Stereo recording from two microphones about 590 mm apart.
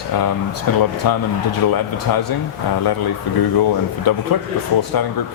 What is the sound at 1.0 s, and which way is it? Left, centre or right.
Speech, left.